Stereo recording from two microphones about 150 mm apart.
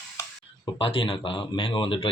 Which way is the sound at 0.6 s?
35° left (ahead or behind).